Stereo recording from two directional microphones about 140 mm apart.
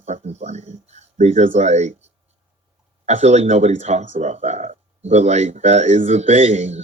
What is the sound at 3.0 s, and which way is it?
Speech, 55° right (ahead or behind).